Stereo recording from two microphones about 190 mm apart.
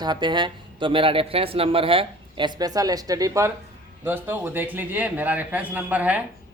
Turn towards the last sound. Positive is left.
turn(degrees=-10)  # may be behind; listen again after turning